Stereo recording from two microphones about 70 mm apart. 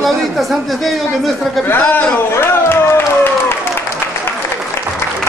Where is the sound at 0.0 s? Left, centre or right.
Centre.